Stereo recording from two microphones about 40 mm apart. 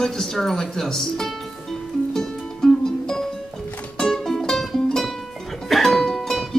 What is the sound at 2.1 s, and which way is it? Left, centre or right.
Music, centre.